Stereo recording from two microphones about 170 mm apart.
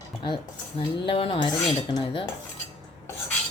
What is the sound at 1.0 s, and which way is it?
Speech, 35° left (ahead or behind).